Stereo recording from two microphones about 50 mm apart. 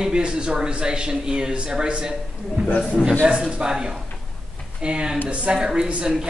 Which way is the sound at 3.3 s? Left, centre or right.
Right.